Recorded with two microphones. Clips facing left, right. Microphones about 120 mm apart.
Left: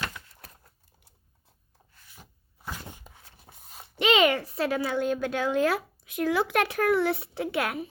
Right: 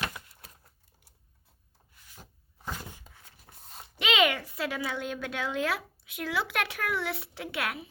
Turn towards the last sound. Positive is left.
turn(degrees=45)  # may be behind; listen again after turning